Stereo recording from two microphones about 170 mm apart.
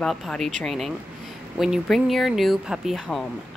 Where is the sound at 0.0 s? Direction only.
5° left (ahead or behind).